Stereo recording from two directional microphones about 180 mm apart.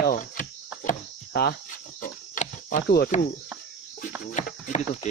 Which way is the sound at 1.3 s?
65° left (ahead or behind).